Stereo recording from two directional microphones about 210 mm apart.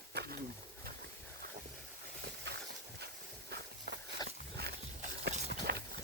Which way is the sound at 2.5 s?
55° right (ahead or behind).